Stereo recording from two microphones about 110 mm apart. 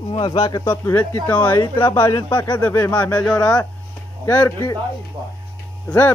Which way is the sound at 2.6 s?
20° left (ahead or behind).